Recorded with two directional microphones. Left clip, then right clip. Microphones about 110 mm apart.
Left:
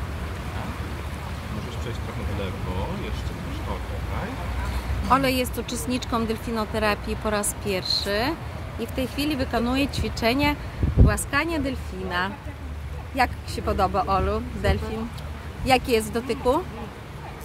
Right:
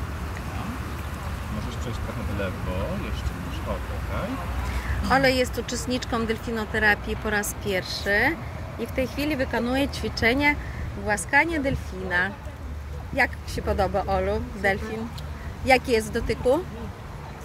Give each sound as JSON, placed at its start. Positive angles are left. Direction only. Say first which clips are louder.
{"t": 5.1, "sound": "speech", "louder": "right 1 dB", "side_deg": 15}